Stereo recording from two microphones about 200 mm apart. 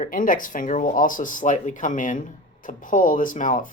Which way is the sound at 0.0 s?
40° left (ahead or behind).